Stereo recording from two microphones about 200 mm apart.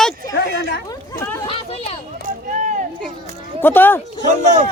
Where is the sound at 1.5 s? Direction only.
30° left (ahead or behind).